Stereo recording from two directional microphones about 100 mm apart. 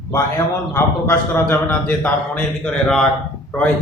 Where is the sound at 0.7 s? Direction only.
20° left (ahead or behind).